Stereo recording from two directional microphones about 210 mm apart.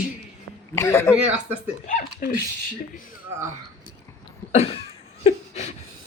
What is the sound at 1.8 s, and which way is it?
Speech, 40° left (ahead or behind).